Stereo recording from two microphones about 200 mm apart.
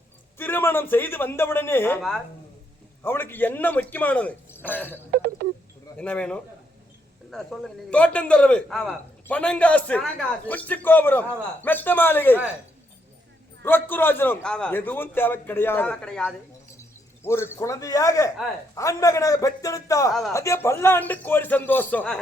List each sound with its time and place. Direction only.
0.3 s a man's voice: 10° left (ahead or behind)
5.1 s a sound: 55° right (ahead or behind)
6.0 s a man's voice: 5° left (ahead or behind)
13.6 s a man's voice: 10° left (ahead or behind)